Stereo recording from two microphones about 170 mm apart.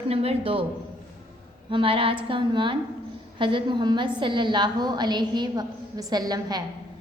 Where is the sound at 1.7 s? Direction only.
30° right (ahead or behind).